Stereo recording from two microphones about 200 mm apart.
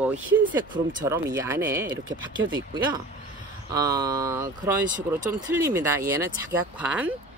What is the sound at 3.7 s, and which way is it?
Speech, 15° right (ahead or behind).